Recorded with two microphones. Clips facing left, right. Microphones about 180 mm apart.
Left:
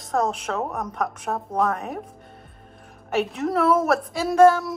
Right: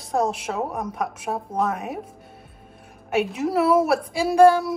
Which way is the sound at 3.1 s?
Centre (ahead or behind).